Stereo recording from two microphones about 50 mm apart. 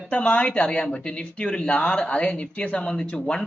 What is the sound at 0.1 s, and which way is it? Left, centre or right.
Speech, left.